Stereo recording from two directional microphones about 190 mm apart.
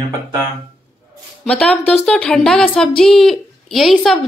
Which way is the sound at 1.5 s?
5° left (ahead or behind).